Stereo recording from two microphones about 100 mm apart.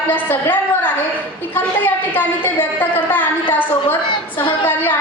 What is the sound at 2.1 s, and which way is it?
A woman's voice, 20° left (ahead or behind).